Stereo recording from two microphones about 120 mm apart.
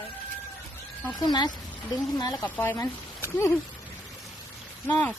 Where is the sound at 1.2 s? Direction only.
35° left (ahead or behind).